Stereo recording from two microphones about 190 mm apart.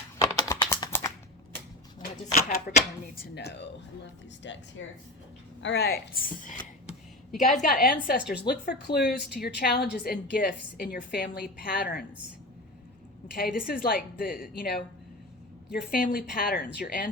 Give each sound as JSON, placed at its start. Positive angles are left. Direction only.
{"t": 0.2, "sound": "typing", "side_deg": 20}
{"t": 2.7, "sound": "a woman's voice", "side_deg": 50}
{"t": 3.2, "sound": "a woman's voice", "side_deg": 60}
{"t": 4.4, "sound": "a woman's voice", "side_deg": 75}
{"t": 8.4, "sound": "a woman's voice", "side_deg": 55}
{"t": 13.3, "sound": "a woman's voice", "side_deg": 50}